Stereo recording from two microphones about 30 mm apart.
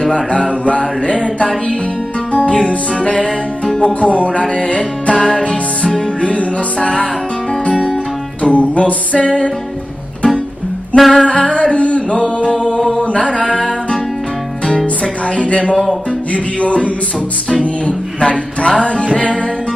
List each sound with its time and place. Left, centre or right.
0.1 s music: left
5.9 s music: left
6.2 s music: left
7.7 s music: centre
8.4 s music: left
11.0 s music: centre
11.2 s singing: left
13.3 s music: left
15.2 s a sound: left
16.3 s music: left
18.2 s music: left